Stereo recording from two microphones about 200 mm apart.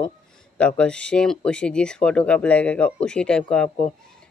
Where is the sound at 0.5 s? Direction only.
5° left (ahead or behind).